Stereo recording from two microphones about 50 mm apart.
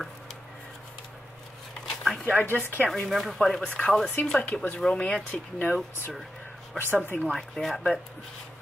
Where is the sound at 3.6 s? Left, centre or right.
Left.